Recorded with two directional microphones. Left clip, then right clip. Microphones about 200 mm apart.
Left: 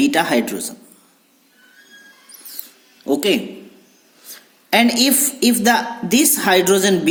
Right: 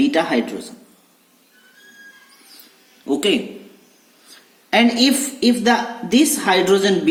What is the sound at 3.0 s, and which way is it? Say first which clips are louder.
A woman's voice: left 1 dB; 40° left (ahead or behind).